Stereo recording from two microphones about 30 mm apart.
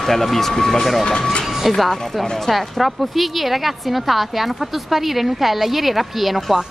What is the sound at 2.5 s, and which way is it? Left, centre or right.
A woman's voice, centre.